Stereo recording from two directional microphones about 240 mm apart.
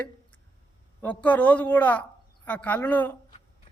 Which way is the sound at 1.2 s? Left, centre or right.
Centre.